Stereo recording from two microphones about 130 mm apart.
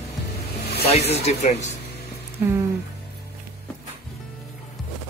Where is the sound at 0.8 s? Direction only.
55° left (ahead or behind).